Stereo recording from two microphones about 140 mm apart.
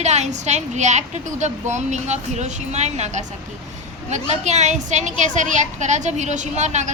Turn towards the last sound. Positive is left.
turn(degrees=-55)  # may be behind; listen again after turning